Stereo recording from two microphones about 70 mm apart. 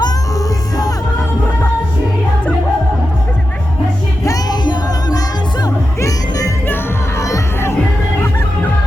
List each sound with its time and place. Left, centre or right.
0.0 s music: left
4.4 s music: left
5.6 s music: left
7.2 s crowd: left